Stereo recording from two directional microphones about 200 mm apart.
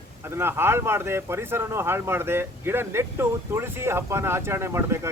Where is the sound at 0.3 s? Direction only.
10° right (ahead or behind).